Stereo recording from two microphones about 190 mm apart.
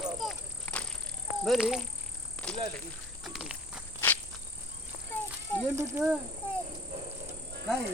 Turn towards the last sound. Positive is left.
turn(degrees=-15)  # may be behind; listen again after turning